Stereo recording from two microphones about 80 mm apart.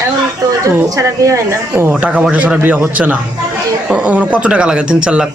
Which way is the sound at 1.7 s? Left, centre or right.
Right.